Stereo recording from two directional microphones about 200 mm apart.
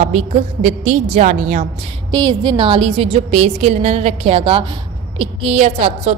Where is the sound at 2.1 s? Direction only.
20° right (ahead or behind).